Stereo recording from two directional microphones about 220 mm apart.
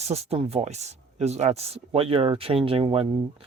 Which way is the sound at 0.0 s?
30° right (ahead or behind).